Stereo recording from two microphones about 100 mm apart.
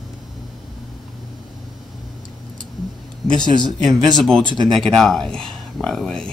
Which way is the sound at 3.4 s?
45° right (ahead or behind).